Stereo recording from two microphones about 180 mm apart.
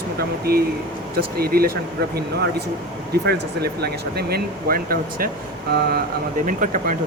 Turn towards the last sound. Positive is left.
turn(degrees=-45)  # may be behind; listen again after turning